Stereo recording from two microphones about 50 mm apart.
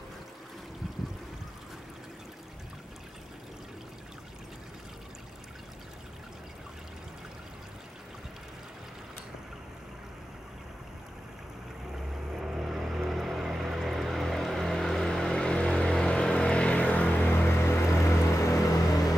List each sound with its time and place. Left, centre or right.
11.9 s boat: centre; by 17.3 s left
17.3 s vehicle: left